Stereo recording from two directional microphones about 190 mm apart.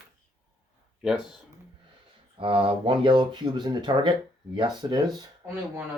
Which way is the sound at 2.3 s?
25° right (ahead or behind).